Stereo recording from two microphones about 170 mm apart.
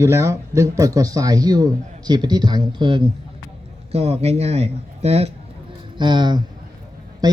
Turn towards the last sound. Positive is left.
turn(degrees=-20)  # may be behind; listen again after turning